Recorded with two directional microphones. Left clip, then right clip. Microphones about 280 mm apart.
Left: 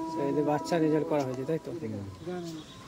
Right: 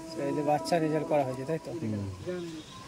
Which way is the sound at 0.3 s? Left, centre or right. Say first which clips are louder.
Right 2 dB; centre.